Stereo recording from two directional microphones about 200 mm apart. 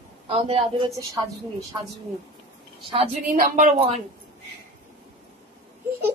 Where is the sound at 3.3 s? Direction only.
40° right (ahead or behind).